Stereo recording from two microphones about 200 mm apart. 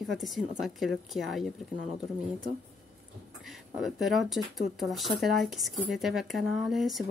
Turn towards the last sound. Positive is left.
turn(degrees=0)  # may be behind; listen again after turning